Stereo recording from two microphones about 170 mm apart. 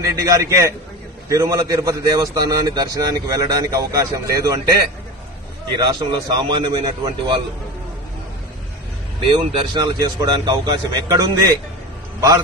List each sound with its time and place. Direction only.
0.0 s a man's voice: 20° right (ahead or behind)
5.7 s a man's voice: 25° right (ahead or behind)
9.3 s a man's voice: 25° right (ahead or behind)